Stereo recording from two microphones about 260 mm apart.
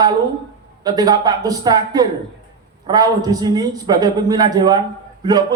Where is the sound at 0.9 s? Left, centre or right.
Centre.